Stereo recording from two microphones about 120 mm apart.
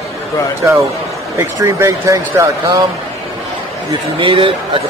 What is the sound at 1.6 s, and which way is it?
Speech, 25° right (ahead or behind).